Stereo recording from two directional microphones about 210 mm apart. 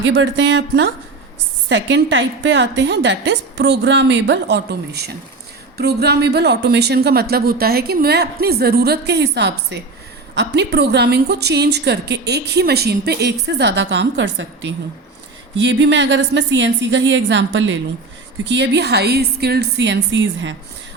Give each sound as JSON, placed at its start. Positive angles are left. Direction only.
{"t": 0.0, "sound": "a woman's voice", "side_deg": -60}